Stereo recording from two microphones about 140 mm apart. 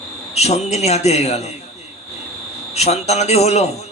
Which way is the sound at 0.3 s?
50° left (ahead or behind).